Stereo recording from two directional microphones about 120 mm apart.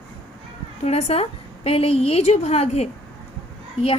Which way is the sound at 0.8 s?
60° left (ahead or behind).